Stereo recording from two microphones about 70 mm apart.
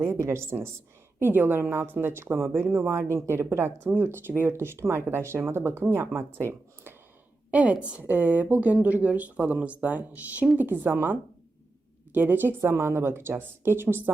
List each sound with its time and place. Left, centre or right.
0.0 s a woman's voice: right
7.5 s a woman's voice: centre